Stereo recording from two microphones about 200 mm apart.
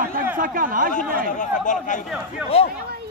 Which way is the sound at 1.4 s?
40° left (ahead or behind).